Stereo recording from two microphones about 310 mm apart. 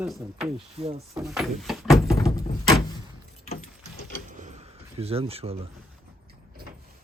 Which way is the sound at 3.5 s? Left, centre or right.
Left.